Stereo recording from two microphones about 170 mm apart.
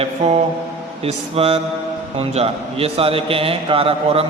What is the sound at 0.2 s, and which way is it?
A man's voice, 40° right (ahead or behind).